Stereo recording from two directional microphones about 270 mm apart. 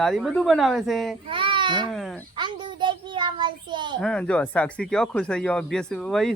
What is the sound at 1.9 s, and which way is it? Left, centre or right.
Speech, centre.